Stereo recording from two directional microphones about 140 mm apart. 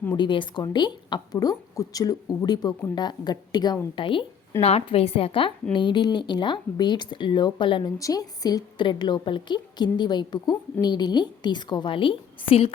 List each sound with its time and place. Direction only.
0.2 s a woman's voice: 35° left (ahead or behind)
7.9 s a woman's voice: 25° left (ahead or behind); by 12.7 s 40° left (ahead or behind)